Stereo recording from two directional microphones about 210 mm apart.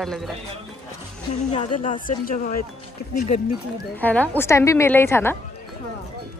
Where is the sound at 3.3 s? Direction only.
30° left (ahead or behind).